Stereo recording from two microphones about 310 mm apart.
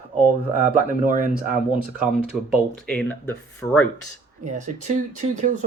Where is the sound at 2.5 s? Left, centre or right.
Centre.